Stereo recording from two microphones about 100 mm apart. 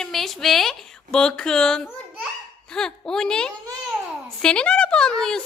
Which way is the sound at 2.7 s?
5° left (ahead or behind).